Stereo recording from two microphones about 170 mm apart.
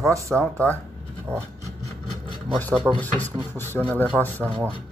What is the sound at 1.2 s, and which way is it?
Wood, 15° right (ahead or behind).